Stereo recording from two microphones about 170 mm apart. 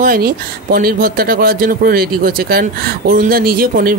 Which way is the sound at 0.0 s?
60° right (ahead or behind).